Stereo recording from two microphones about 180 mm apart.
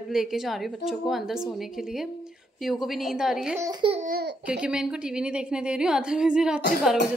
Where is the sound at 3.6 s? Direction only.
25° right (ahead or behind).